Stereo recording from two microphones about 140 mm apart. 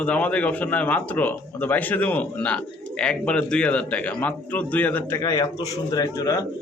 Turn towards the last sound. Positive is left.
turn(degrees=25)  # may be behind; listen again after turning